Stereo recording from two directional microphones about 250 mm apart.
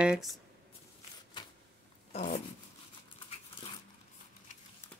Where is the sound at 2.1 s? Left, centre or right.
Left.